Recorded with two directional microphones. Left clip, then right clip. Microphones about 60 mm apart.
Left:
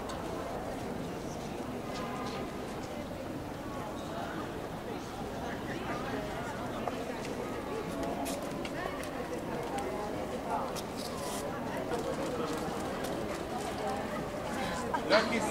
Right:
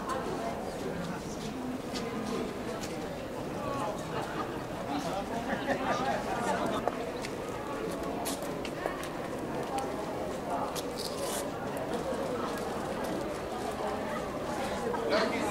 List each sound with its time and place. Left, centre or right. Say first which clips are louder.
15.1 s chatter: left 3 dB; left